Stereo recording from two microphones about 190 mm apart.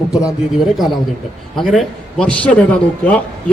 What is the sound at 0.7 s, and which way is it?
Speech, centre (ahead or behind).